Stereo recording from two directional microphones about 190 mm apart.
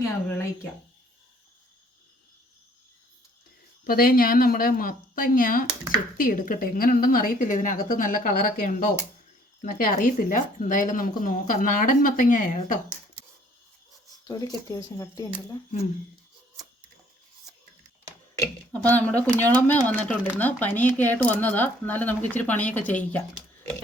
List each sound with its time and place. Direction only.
0.0 s speech: 10° left (ahead or behind)
3.8 s speech: 50° left (ahead or behind)
14.3 s speech: 20° left (ahead or behind)
18.7 s speech: 10° left (ahead or behind)